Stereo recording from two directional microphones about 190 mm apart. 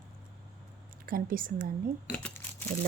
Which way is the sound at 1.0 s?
50° right (ahead or behind).